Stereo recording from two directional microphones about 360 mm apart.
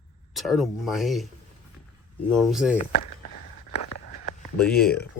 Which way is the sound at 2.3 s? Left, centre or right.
Centre.